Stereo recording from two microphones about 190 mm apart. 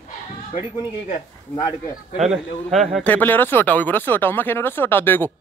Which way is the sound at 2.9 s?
10° left (ahead or behind).